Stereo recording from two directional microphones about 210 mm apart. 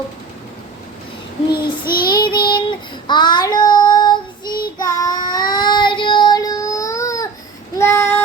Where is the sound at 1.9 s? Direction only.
45° left (ahead or behind).